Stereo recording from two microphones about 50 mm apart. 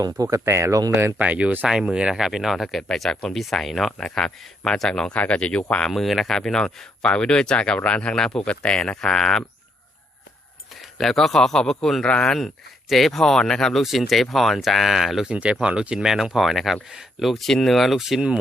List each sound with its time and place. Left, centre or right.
0.3 s speech: right
1.2 s speech: right
1.8 s speech: centre
2.2 s speech: centre
2.9 s speech: centre
5.1 s speech: left
5.9 s speech: centre
10.8 s a man's voice: centre
12.0 s speech: left
12.9 s speech: centre
15.3 s speech: right
16.0 s speech: centre
17.9 s speech: centre